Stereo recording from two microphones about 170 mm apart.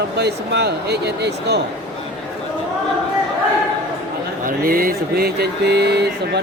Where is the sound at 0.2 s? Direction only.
75° right (ahead or behind).